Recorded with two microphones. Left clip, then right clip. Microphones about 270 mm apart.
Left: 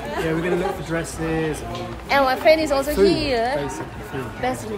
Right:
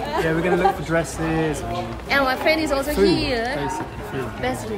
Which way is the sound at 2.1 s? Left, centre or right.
Centre.